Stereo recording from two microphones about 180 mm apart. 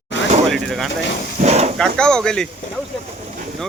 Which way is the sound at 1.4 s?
40° right (ahead or behind).